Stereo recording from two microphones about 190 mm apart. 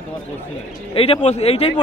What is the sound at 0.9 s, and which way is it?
Speech, 30° left (ahead or behind).